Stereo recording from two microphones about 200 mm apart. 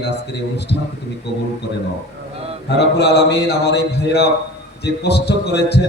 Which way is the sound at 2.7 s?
55° left (ahead or behind).